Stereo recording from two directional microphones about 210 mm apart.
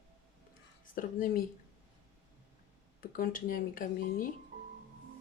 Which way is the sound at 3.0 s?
40° left (ahead or behind).